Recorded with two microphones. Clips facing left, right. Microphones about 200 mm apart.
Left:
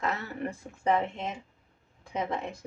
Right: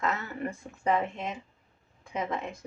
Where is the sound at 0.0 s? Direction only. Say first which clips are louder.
Right 1 dB; 35° left (ahead or behind).